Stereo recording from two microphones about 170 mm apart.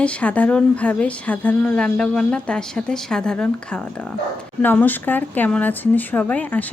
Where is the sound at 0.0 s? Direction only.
5° left (ahead or behind).